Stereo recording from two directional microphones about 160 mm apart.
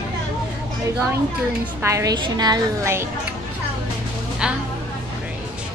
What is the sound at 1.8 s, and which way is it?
A woman's voice, 20° right (ahead or behind).